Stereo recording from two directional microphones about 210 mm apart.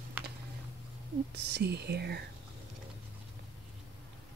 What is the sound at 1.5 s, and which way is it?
Speech, 50° right (ahead or behind).